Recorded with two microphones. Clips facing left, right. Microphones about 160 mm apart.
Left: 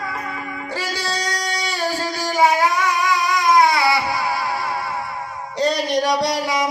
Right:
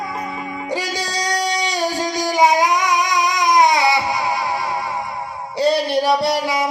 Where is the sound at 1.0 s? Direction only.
15° right (ahead or behind).